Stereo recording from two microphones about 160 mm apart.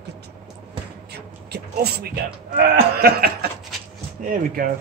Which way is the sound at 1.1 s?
90° right.